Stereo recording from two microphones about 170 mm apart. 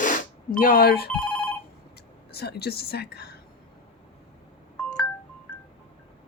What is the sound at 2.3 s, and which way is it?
Speech, 70° left (ahead or behind).